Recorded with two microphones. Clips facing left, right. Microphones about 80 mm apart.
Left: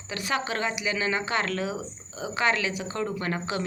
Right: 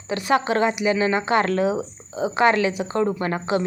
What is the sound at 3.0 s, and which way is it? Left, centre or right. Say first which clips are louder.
Speech: right 7 dB; right.